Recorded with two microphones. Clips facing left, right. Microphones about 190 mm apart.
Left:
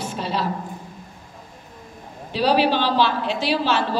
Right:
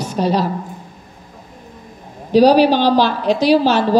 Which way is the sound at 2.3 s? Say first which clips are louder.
Right 9 dB; 40° right (ahead or behind).